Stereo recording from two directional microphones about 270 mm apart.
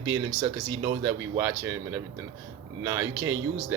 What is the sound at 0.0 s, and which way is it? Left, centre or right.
Speech, centre.